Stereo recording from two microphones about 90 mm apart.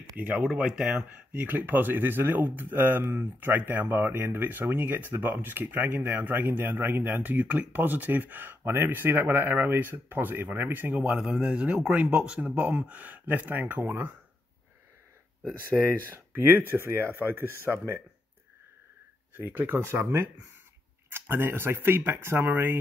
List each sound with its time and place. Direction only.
0.2 s speech: 15° right (ahead or behind)
0.9 s speech: 20° right (ahead or behind)
15.7 s speech: 25° right (ahead or behind)
19.3 s speech: 20° right (ahead or behind)